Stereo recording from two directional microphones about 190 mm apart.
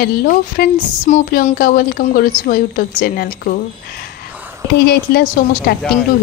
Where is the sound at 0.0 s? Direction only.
50° left (ahead or behind).